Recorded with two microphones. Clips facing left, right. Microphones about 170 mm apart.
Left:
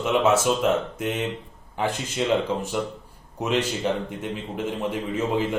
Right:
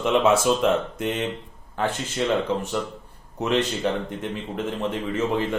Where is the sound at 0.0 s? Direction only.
5° left (ahead or behind).